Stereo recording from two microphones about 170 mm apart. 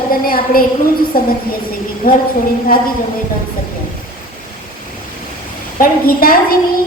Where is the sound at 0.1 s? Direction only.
60° left (ahead or behind).